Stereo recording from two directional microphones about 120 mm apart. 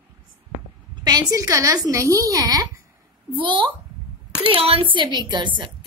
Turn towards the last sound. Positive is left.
turn(degrees=-40)  # may be behind; listen again after turning